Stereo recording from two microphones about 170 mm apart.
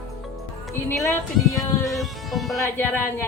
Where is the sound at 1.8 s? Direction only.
Centre (ahead or behind).